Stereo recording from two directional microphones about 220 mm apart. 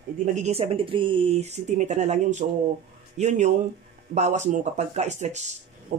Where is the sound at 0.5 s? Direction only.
25° right (ahead or behind).